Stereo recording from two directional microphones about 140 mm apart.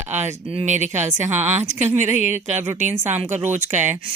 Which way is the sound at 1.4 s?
55° right (ahead or behind).